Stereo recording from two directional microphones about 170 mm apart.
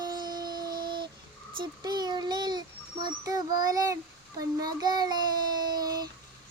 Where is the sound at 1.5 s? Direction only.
25° right (ahead or behind).